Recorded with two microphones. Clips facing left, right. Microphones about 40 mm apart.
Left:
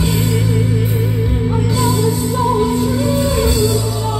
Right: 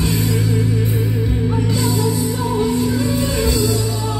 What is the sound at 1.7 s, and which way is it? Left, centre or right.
Music, centre.